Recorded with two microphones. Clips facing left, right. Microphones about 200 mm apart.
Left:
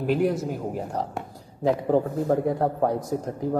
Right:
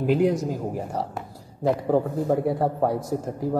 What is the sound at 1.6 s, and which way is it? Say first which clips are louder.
Speech: even; 5° right (ahead or behind).